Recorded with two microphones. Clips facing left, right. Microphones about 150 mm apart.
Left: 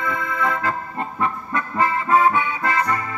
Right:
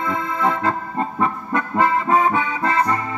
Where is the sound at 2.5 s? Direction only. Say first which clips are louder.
Right 2 dB; 30° right (ahead or behind).